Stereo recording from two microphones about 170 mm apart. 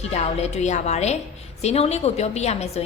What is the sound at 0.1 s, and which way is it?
A woman's voice, 40° left (ahead or behind).